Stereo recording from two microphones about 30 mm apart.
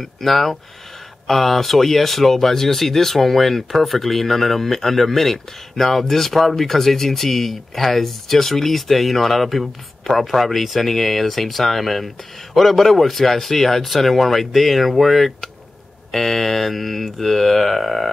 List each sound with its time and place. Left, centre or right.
0.0 s speech: centre